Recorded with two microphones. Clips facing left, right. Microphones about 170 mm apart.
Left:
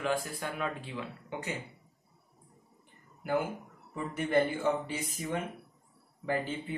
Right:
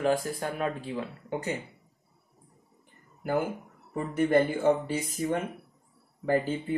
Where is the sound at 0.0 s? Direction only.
40° right (ahead or behind).